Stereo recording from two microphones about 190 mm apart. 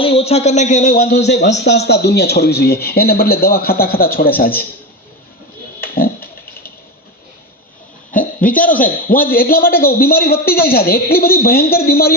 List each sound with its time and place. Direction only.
0.0 s a man's voice: 30° left (ahead or behind); by 1.0 s 45° left (ahead or behind)
1.1 s a man's voice: 60° left (ahead or behind)
5.8 s a sound: 50° left (ahead or behind)
8.4 s a man's voice: 45° left (ahead or behind)